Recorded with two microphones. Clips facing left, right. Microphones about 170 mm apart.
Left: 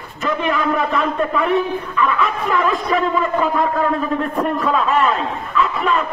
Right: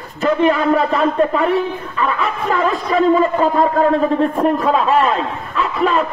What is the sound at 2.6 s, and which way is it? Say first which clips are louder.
A man's voice: right 4 dB; 35° right (ahead or behind).